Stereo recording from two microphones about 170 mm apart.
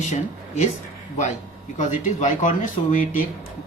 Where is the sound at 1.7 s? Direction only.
45° left (ahead or behind).